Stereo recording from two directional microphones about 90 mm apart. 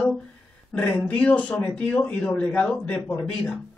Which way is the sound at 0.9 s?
10° left (ahead or behind).